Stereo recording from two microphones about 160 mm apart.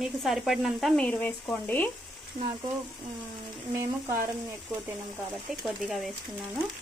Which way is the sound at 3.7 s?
20° right (ahead or behind).